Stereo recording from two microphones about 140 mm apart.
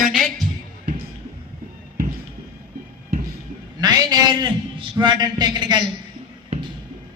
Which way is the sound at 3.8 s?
30° right (ahead or behind).